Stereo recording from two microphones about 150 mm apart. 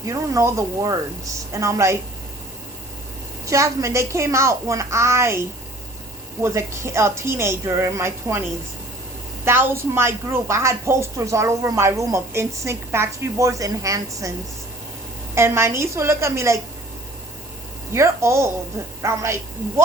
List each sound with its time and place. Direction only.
0.0 s a woman's voice: 20° right (ahead or behind)
3.4 s a woman's voice: 20° right (ahead or behind)
15.4 s a woman's voice: 15° right (ahead or behind)
17.9 s a woman's voice: 20° right (ahead or behind)